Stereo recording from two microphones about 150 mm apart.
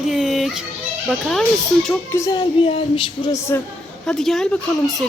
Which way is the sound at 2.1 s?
20° left (ahead or behind).